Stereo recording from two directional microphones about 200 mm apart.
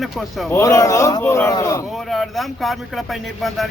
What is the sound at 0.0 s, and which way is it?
Speech, centre (ahead or behind).